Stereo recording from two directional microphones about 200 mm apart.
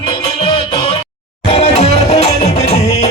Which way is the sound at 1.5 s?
35° left (ahead or behind).